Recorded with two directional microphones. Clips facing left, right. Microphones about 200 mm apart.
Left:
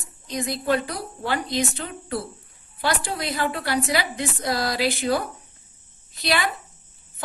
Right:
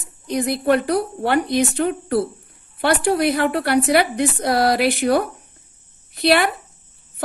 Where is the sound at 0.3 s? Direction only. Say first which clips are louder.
Right 6 dB; 60° right (ahead or behind).